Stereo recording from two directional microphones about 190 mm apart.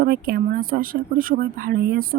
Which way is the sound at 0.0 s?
55° right (ahead or behind).